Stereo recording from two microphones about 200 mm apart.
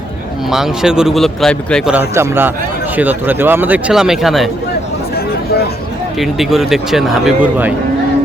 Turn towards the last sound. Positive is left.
turn(degrees=-5)  # may be behind; listen again after turning